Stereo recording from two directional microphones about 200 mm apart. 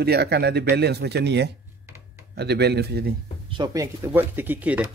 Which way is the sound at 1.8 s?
15° right (ahead or behind).